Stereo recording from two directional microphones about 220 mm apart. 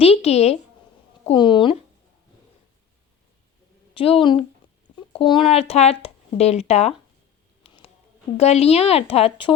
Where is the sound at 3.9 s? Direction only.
25° left (ahead or behind).